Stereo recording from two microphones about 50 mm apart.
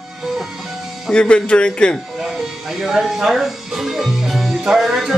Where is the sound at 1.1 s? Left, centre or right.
Left.